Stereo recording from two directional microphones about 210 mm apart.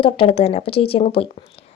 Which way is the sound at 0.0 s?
25° left (ahead or behind).